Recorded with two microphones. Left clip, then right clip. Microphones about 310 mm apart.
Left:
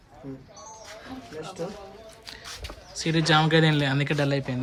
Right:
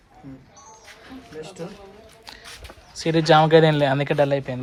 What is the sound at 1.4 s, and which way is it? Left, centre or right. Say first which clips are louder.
Speech: left 3 dB; centre.